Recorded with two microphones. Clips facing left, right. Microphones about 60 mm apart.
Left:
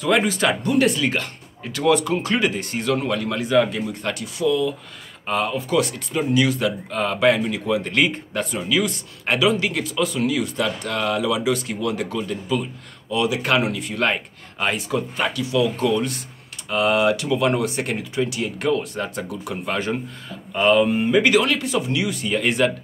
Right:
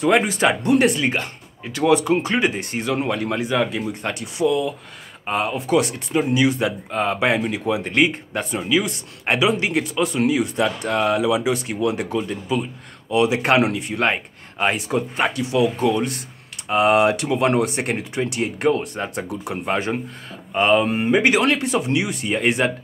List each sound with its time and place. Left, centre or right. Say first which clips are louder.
0.0 s speech: right 2 dB; right
4.0 s speech: right 2 dB; right